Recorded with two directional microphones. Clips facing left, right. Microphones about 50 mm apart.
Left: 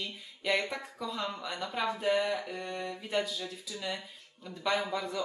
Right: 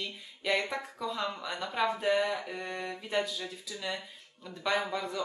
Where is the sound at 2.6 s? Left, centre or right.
Centre.